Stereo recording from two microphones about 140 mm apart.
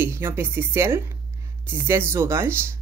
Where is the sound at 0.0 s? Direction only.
15° right (ahead or behind).